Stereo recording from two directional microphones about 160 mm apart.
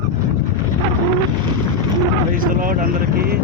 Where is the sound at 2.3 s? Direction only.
60° right (ahead or behind).